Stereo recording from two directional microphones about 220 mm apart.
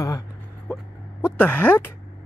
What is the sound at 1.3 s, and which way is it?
Speech, 5° left (ahead or behind).